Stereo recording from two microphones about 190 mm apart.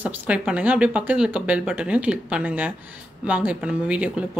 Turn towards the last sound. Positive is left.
turn(degrees=-5)  # may be behind; listen again after turning